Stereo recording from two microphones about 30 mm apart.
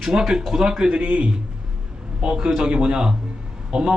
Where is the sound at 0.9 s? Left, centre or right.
Right.